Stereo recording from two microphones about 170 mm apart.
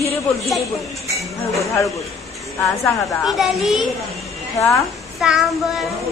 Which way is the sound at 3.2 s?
Centre (ahead or behind).